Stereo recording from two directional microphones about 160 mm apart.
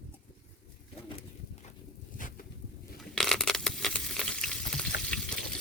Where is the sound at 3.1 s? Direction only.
5° left (ahead or behind).